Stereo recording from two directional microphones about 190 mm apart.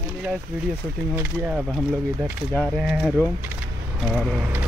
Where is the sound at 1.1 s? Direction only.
10° right (ahead or behind).